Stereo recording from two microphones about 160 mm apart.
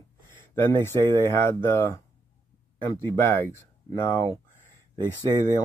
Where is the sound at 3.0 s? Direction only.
15° left (ahead or behind).